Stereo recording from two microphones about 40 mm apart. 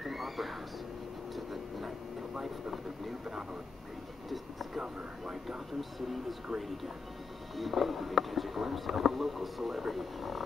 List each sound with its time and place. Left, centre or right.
0.0 s music: centre
1.3 s vehicle: centre
4.3 s a sound: centre
5.8 s speech: centre
7.5 s speech: centre